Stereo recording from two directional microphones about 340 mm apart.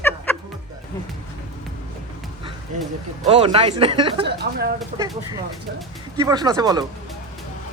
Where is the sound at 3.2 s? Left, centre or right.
Centre.